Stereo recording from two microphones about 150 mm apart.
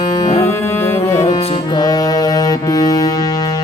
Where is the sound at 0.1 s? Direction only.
20° left (ahead or behind).